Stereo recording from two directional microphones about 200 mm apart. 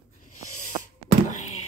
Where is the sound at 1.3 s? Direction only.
35° left (ahead or behind).